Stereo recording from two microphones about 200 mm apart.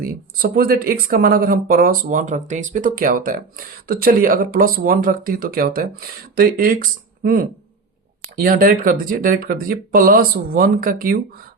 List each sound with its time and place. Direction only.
0.5 s speech: 45° right (ahead or behind)